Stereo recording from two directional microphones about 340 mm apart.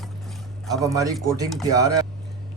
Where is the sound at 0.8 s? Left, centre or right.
Centre.